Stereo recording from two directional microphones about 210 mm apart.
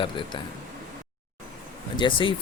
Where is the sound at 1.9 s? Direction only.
25° left (ahead or behind).